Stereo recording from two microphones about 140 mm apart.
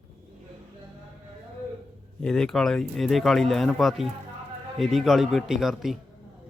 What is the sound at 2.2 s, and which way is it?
A man's voice, 5° left (ahead or behind).